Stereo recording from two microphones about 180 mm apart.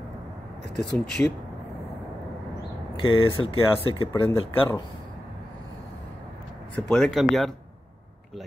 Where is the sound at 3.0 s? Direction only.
30° left (ahead or behind).